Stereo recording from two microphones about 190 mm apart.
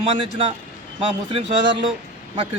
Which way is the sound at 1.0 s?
30° right (ahead or behind).